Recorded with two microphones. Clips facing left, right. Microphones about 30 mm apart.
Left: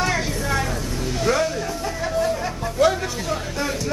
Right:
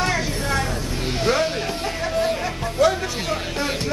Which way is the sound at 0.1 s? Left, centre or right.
Centre.